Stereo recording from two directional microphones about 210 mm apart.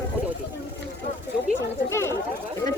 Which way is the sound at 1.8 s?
15° left (ahead or behind).